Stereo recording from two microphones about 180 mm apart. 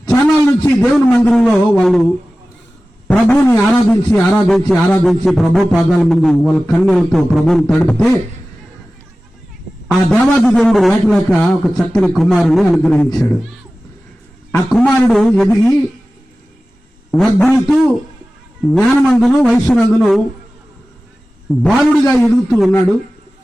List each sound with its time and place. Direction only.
0.0 s a sound: 20° left (ahead or behind)
0.8 s a man's voice: 5° left (ahead or behind)
3.1 s a man's voice: 5° left (ahead or behind)
10.1 s a man's voice: 5° left (ahead or behind)
14.7 s a man's voice: 5° left (ahead or behind)
17.1 s a man's voice: centre (ahead or behind)
21.5 s a man's voice: centre (ahead or behind)